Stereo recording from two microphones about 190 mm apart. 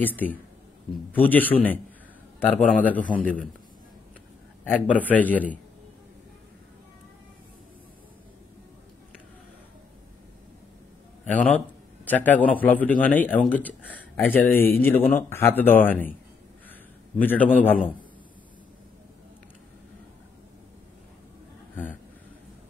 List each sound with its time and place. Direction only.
0.0 s speech: 10° left (ahead or behind)
4.6 s speech: 10° left (ahead or behind)
11.3 s a man's voice: 5° left (ahead or behind)
17.2 s speech: 10° left (ahead or behind)